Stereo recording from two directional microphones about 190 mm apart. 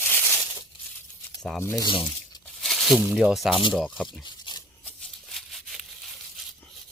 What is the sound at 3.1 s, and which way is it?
Speech, centre (ahead or behind).